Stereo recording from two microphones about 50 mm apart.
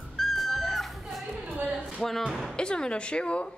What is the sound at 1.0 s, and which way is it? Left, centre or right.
Chatter, centre.